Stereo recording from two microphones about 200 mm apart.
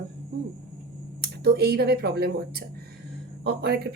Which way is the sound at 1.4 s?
50° right (ahead or behind).